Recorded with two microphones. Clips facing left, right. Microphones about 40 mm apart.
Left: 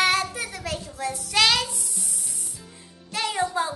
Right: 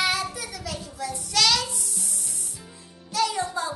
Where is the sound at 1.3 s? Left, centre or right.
Left.